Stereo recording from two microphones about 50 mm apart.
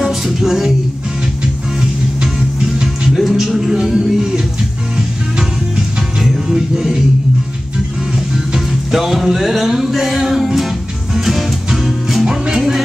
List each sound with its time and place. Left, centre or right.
0.0 s music: centre
2.6 s music: centre
3.2 s a sound: centre
5.8 s music: centre
8.5 s music: centre